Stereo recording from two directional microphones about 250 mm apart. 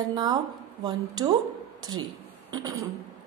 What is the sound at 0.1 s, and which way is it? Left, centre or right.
A woman's voice, centre.